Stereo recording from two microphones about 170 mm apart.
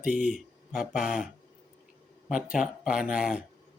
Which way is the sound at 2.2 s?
5° right (ahead or behind).